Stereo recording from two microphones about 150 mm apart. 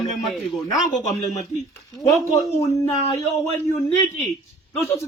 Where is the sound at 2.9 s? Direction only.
45° left (ahead or behind).